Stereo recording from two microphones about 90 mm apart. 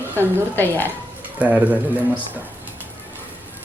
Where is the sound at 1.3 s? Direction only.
15° right (ahead or behind).